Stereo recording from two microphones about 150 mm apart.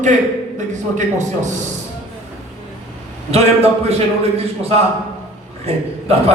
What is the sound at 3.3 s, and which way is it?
Speech, 45° right (ahead or behind).